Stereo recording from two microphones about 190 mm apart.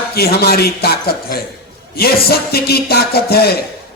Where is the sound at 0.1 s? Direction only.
55° left (ahead or behind).